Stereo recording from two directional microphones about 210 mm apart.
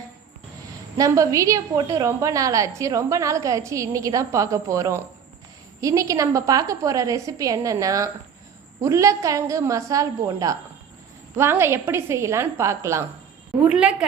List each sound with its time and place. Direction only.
0.9 s a woman's voice: 15° right (ahead or behind)